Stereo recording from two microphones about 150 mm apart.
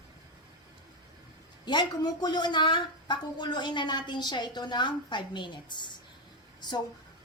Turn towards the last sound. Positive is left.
turn(degrees=30)  # may be behind; listen again after turning